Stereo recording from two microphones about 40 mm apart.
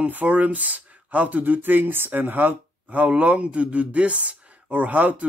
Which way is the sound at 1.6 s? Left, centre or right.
Right.